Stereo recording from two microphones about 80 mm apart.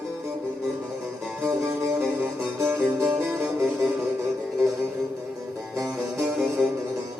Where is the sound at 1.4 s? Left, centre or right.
Right.